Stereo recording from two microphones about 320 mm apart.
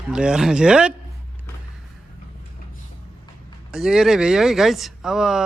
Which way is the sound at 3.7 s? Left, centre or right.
Centre.